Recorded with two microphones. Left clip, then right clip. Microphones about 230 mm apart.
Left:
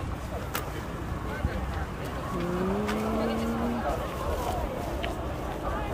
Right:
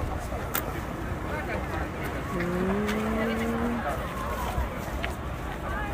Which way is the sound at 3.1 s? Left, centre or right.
Left.